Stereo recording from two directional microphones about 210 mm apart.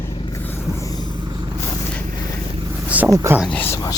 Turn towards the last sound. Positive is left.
turn(degrees=15)  # may be behind; listen again after turning